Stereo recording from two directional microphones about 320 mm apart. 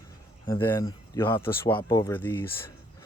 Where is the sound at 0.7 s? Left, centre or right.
Centre.